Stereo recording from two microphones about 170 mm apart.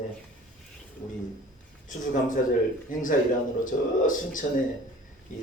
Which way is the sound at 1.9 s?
50° left (ahead or behind).